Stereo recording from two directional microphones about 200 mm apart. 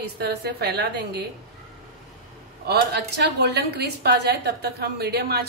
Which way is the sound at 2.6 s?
55° right (ahead or behind).